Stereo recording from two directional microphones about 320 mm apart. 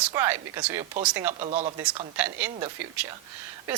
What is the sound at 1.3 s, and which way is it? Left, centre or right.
Speech, right.